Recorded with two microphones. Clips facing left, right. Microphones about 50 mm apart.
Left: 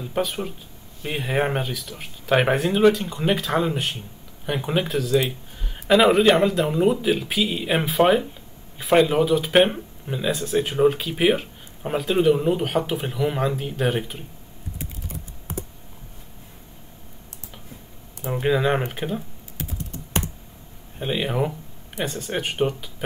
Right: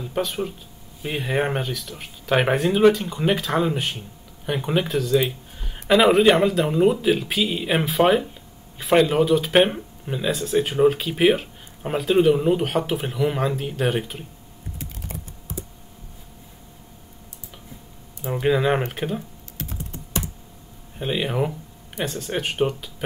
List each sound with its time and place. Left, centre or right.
0.0 s speech: centre
15.5 s computer keyboard: left
18.3 s speech: centre
21.0 s speech: centre